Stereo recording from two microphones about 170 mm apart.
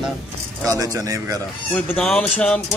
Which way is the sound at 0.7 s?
20° right (ahead or behind).